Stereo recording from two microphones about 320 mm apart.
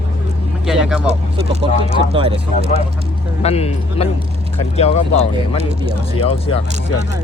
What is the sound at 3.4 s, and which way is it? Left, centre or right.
A man's voice, centre.